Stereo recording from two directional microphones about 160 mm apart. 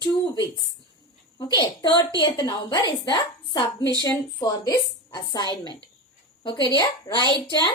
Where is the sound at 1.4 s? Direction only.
25° left (ahead or behind).